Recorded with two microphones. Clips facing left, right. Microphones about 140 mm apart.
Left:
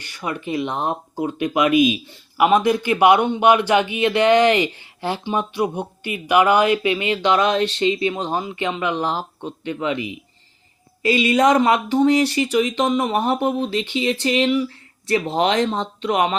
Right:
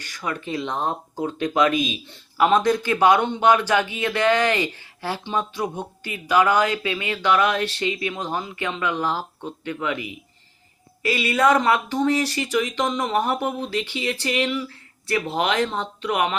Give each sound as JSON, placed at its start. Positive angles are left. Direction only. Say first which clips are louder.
{"t": 0.2, "sound": "speech", "louder": "left 3 dB", "side_deg": 15}